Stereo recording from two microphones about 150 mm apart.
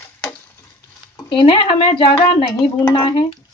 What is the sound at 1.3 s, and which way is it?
Speech, 35° left (ahead or behind).